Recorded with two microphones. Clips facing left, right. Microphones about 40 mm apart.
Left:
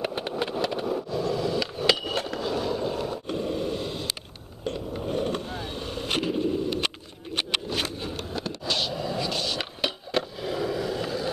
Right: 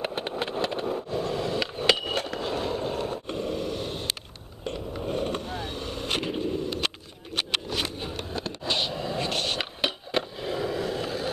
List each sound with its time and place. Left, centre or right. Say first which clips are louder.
0.0 s vehicle: left 1 dB; centre
1.1 s skateboard: left 2 dB; right
2.3 s skateboard: left 1 dB; right
3.3 s a sound: left 2 dB; centre
4.7 s skateboard: even; centre
6.4 s a sound: left 2 dB; centre
8.6 s a sound: even; centre
9.2 s skateboard: right 3 dB; right
9.6 s skateboard: right 1 dB; centre